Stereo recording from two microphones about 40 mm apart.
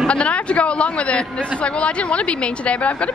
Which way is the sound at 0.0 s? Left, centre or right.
Left.